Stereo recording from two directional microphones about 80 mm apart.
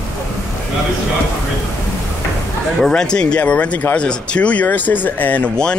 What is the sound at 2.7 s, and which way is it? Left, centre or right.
A man's voice, centre.